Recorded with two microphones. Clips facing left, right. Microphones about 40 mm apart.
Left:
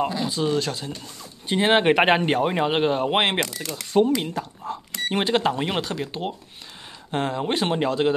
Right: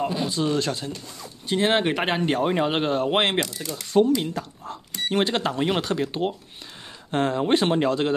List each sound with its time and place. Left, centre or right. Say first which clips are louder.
0.3 s speech: even; centre
1.5 s speech: left 2 dB; centre
1.9 s speech: left 6 dB; left
2.2 s speech: left 1 dB; centre
5.8 s speech: right 3 dB; centre